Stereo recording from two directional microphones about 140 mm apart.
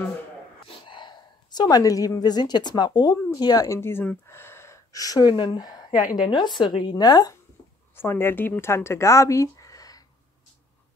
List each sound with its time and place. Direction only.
0.7 s a woman's voice: 35° left (ahead or behind)
5.9 s a woman's voice: 75° left (ahead or behind)
6.2 s speech: 35° left (ahead or behind)
7.9 s speech: 15° left (ahead or behind)